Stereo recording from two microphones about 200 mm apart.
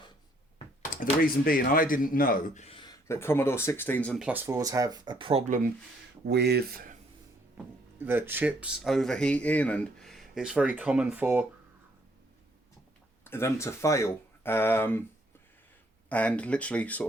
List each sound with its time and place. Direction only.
0.9 s speech: 40° left (ahead or behind)
2.6 s speech: 25° left (ahead or behind); by 4.2 s 10° left (ahead or behind)
4.2 s speech: 10° right (ahead or behind); by 5.4 s 25° right (ahead or behind)
5.5 s speech: 45° right (ahead or behind)
6.2 s speech: 55° right (ahead or behind)
7.5 s speech: 10° right (ahead or behind)
13.2 s speech: 10° left (ahead or behind)
16.0 s speech: 5° left (ahead or behind)